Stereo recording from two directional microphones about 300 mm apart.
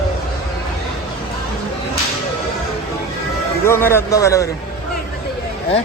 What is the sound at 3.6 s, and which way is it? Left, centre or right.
Speech, centre.